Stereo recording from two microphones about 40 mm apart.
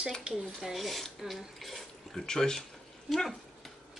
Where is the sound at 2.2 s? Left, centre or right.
Centre.